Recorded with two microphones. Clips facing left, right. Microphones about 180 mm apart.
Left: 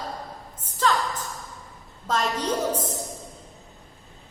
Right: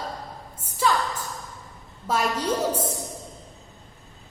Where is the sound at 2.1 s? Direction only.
10° right (ahead or behind).